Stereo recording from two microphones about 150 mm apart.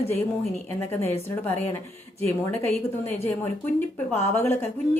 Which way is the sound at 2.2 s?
15° left (ahead or behind).